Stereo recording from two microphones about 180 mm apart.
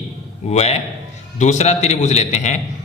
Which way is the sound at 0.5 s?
35° left (ahead or behind).